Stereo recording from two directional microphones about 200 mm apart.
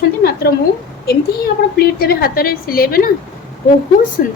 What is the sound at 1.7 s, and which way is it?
A woman's voice, 50° left (ahead or behind).